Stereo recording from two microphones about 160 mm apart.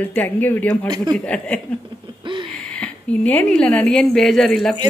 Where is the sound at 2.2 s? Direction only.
30° right (ahead or behind).